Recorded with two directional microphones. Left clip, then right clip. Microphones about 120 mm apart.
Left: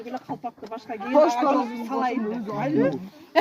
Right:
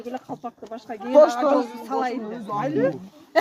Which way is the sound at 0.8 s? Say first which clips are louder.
Right 4 dB; 15° right (ahead or behind).